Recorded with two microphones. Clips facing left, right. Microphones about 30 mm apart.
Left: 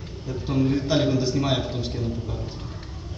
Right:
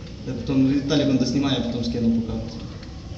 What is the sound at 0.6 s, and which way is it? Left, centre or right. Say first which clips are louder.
Speech: right 3 dB; centre.